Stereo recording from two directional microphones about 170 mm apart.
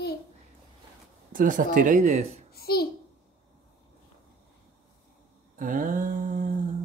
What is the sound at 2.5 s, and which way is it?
Speech, 65° left (ahead or behind).